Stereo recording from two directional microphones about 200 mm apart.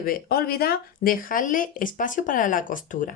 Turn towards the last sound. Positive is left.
turn(degrees=40)  # may be behind; listen again after turning